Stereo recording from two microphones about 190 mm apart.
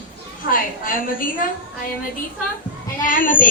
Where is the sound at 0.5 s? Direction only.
45° left (ahead or behind).